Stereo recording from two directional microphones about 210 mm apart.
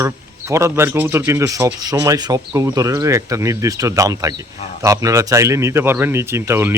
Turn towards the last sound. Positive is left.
turn(degrees=-10)  # may be behind; listen again after turning